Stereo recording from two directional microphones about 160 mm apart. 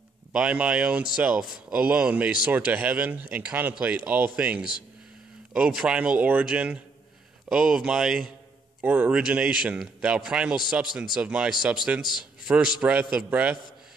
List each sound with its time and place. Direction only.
0.3 s speech: 5° right (ahead or behind)
12.0 s speech: 30° left (ahead or behind)
12.5 s speech: 10° right (ahead or behind)